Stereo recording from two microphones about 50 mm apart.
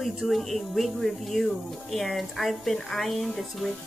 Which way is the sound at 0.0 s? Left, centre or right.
Centre.